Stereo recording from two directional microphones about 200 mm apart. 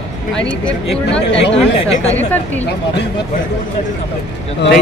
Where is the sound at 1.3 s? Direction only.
65° left (ahead or behind).